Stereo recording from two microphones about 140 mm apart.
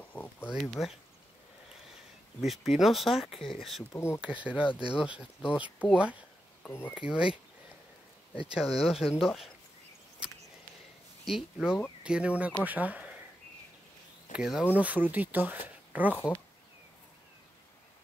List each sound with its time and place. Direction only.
0.1 s a sound: 10° left (ahead or behind)
0.6 s speech: centre (ahead or behind)
2.4 s speech: centre (ahead or behind)
3.9 s speech: 20° left (ahead or behind)
4.2 s speech: 10° right (ahead or behind)
6.6 s speech: 15° left (ahead or behind)
6.9 s speech: 5° right (ahead or behind)
8.5 s speech: 5° right (ahead or behind)
11.2 s speech: centre (ahead or behind)
14.3 s speech: 5° right (ahead or behind)